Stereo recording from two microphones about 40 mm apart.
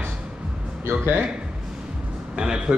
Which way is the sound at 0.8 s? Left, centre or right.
Right.